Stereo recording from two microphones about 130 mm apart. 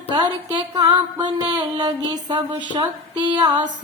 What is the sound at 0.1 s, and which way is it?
Music, 35° right (ahead or behind).